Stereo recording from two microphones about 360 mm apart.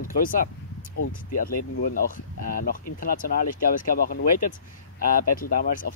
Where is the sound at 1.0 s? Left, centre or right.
Left.